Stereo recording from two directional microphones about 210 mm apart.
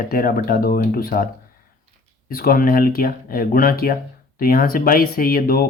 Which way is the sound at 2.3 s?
45° left (ahead or behind).